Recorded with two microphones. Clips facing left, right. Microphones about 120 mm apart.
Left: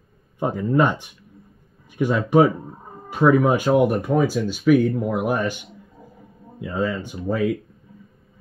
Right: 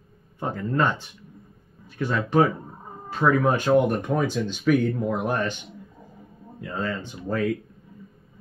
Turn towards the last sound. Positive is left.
turn(degrees=10)  # may be behind; listen again after turning